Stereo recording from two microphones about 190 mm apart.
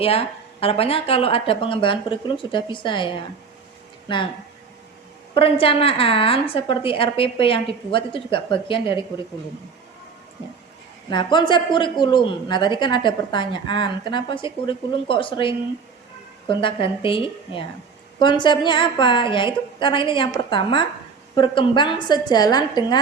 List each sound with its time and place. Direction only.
0.0 s speech: 30° left (ahead or behind)
5.3 s speech: 30° left (ahead or behind)
11.1 s speech: 25° left (ahead or behind)